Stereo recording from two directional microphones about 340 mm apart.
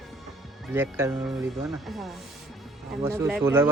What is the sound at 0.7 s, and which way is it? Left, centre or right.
A man's voice, centre.